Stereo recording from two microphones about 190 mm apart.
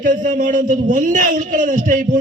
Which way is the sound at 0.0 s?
45° right (ahead or behind).